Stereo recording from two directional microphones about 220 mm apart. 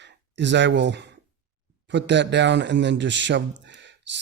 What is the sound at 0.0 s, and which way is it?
Speech, 55° right (ahead or behind).